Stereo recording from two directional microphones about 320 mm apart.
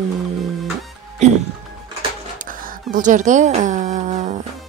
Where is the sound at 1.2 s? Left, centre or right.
Right.